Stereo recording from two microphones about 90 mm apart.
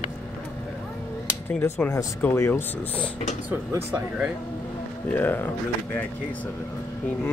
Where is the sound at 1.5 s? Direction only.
15° left (ahead or behind).